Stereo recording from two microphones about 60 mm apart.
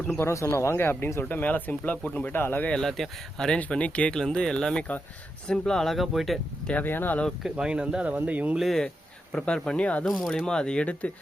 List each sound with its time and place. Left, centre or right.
0.2 s speech: left
2.3 s speech: left
2.6 s speech: centre
3.6 s speech: left
4.1 s speech: centre
6.8 s speech: left
7.5 s speech: centre
8.5 s speech: centre
9.3 s speech: centre
10.1 s speech: centre